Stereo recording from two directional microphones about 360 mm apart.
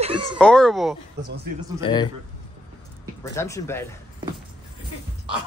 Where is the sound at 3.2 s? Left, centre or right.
Centre.